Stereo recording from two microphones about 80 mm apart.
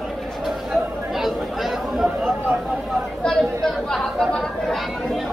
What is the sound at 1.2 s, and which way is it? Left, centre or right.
Chatter, centre.